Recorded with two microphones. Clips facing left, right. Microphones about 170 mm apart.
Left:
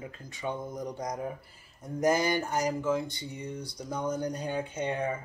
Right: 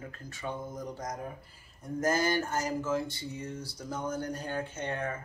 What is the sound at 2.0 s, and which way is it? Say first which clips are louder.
Speech: left 2 dB; 15° left (ahead or behind).